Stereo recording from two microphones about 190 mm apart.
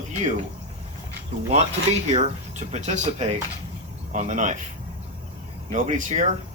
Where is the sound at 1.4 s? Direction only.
35° right (ahead or behind).